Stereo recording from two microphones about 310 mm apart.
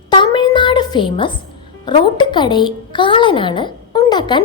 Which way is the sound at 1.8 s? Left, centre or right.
Centre.